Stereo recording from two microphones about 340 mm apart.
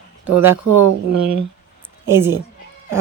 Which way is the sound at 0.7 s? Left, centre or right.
Right.